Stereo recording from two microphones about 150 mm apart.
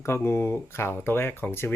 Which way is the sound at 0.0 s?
15° left (ahead or behind).